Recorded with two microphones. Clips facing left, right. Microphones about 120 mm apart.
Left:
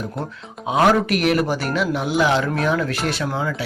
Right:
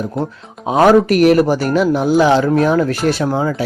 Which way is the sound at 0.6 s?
40° right (ahead or behind).